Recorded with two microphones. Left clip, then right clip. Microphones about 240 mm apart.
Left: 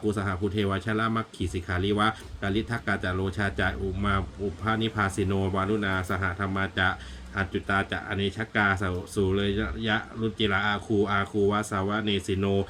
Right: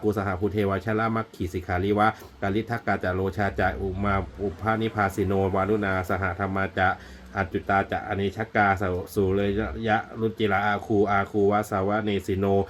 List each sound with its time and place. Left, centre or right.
0.1 s speech: centre